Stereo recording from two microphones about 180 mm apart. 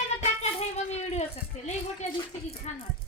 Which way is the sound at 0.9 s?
40° left (ahead or behind).